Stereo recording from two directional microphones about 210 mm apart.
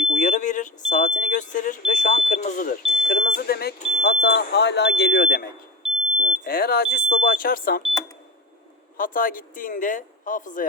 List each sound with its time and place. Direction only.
0.1 s smoke detector: 35° left (ahead or behind)
3.2 s smoke detector: 50° left (ahead or behind)
6.1 s smoke detector: 35° right (ahead or behind)
6.4 s smoke detector: 45° left (ahead or behind)
9.0 s speech: 40° left (ahead or behind)